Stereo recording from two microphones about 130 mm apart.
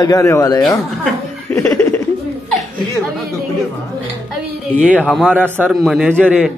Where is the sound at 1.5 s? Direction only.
25° left (ahead or behind).